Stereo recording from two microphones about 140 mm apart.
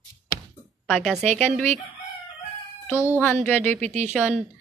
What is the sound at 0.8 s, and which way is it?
Speech, 5° left (ahead or behind).